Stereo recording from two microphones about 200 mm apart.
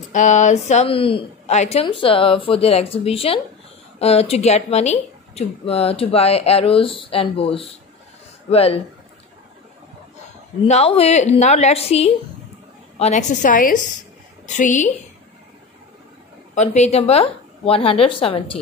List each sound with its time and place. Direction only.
0.1 s speech: 40° left (ahead or behind)
10.6 s a woman's voice: 30° left (ahead or behind)
16.5 s a woman's voice: 35° left (ahead or behind)